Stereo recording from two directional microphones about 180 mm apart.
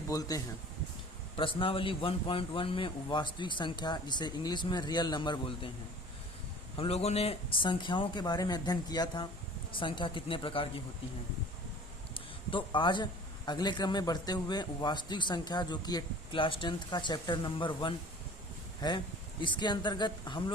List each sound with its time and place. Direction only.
0.1 s a man's voice: 20° left (ahead or behind)
6.7 s a man's voice: 35° left (ahead or behind)
12.1 s a man's voice: 30° left (ahead or behind)